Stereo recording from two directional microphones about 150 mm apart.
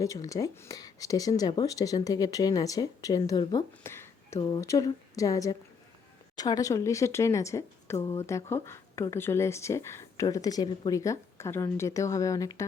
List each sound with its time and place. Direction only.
0.0 s speech: 20° left (ahead or behind)